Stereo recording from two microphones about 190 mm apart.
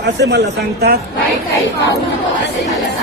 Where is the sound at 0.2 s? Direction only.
60° right (ahead or behind).